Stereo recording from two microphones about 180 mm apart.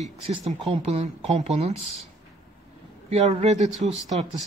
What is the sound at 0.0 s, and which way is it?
Speech, 30° right (ahead or behind).